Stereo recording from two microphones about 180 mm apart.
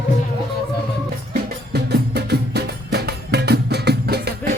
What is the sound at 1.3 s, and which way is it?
Music, 65° right (ahead or behind).